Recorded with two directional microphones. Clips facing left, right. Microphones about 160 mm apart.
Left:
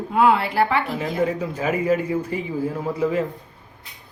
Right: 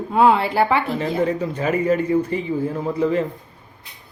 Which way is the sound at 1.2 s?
5° left (ahead or behind).